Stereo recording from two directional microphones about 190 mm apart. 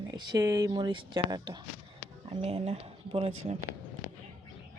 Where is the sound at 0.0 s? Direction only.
20° right (ahead or behind).